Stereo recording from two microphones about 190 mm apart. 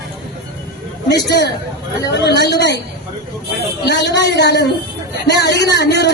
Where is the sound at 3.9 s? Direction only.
65° left (ahead or behind).